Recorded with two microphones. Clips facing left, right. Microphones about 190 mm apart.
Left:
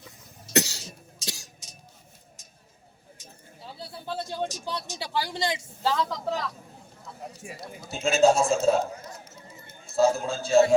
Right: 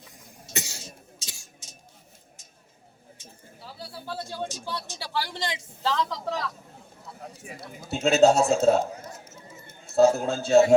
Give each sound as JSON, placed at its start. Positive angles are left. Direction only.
{"t": 0.5, "sound": "cough", "side_deg": 75}
{"t": 3.6, "sound": "speech", "side_deg": 20}
{"t": 7.5, "sound": "a man's voice", "side_deg": -65}